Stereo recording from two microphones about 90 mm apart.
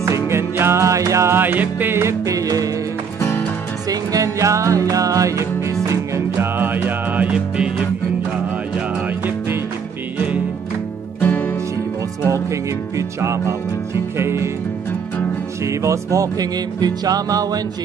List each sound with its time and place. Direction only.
0.0 s music: 30° right (ahead or behind)
3.9 s music: 40° right (ahead or behind); by 7.7 s 10° right (ahead or behind)
11.1 s music: 20° left (ahead or behind)
12.3 s music: 35° right (ahead or behind)
15.6 s music: 35° right (ahead or behind)